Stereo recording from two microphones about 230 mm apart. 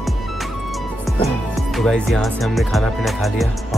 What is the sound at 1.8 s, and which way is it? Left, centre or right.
Speech, centre.